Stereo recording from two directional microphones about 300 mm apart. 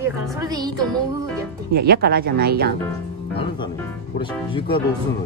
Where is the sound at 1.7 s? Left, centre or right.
Right.